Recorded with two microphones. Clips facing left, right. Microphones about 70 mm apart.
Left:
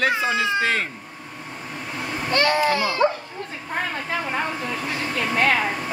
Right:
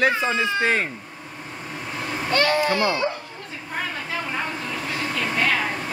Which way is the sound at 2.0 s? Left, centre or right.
Centre.